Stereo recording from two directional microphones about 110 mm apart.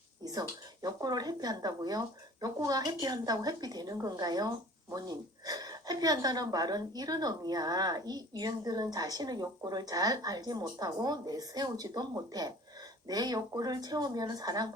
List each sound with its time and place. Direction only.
0.3 s speech: 35° right (ahead or behind)